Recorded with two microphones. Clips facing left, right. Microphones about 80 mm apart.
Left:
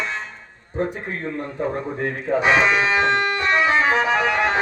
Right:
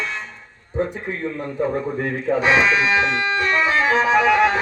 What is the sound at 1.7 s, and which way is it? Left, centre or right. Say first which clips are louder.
Speech: right 2 dB; centre.